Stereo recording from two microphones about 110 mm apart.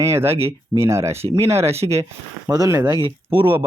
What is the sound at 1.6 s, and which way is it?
Speech, 70° right (ahead or behind).